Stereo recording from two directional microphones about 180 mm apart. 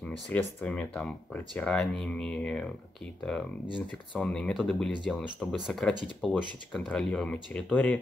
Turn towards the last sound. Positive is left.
turn(degrees=5)  # may be behind; listen again after turning